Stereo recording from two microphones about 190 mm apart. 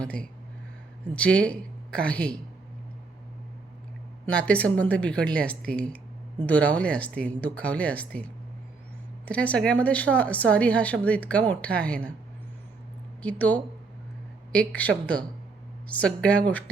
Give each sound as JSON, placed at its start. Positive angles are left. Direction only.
{"t": 1.1, "sound": "speech", "side_deg": 5}
{"t": 4.3, "sound": "speech", "side_deg": 5}
{"t": 13.2, "sound": "speech", "side_deg": 10}